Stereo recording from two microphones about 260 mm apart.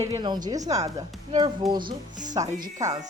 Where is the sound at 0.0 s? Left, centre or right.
Centre.